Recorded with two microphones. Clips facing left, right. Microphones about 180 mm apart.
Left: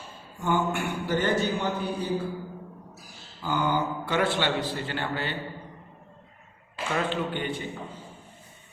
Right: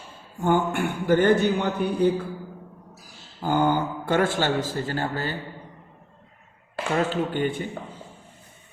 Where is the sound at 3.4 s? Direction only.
50° right (ahead or behind).